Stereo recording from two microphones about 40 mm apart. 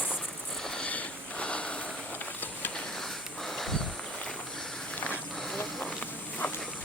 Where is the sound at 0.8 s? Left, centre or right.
Left.